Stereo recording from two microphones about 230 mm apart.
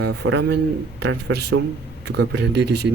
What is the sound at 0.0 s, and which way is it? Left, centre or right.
Speech, right.